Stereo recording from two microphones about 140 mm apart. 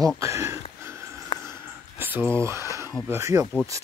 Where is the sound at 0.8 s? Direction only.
20° right (ahead or behind).